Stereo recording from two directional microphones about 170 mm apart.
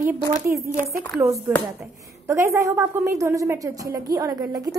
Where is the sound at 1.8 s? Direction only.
15° right (ahead or behind).